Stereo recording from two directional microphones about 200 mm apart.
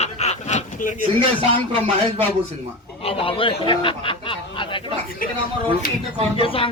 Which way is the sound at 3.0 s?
30° left (ahead or behind).